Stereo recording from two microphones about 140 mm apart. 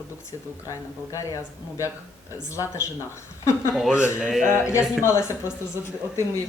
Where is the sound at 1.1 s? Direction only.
25° left (ahead or behind).